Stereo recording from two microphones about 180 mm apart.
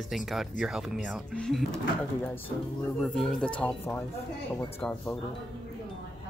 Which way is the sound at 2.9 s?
Centre (ahead or behind).